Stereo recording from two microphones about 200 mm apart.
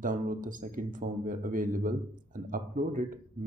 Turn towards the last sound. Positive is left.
turn(degrees=-40)  # may be behind; listen again after turning